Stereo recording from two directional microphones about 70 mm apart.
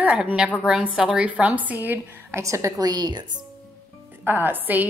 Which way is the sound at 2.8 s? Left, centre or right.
Right.